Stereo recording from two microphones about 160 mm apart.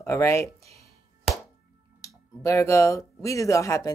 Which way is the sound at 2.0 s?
20° left (ahead or behind).